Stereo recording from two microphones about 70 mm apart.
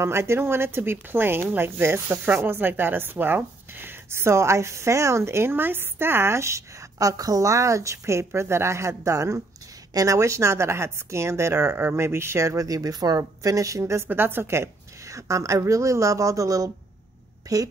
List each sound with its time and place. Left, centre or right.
0.0 s speech: right
14.0 s speech: right
17.4 s a sound: right